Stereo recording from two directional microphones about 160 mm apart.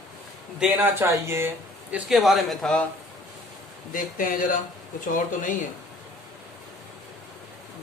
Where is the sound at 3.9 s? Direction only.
60° left (ahead or behind).